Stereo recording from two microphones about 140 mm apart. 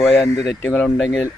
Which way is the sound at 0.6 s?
10° left (ahead or behind).